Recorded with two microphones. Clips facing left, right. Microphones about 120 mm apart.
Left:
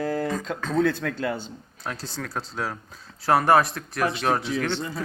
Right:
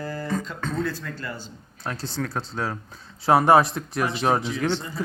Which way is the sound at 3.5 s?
25° right (ahead or behind).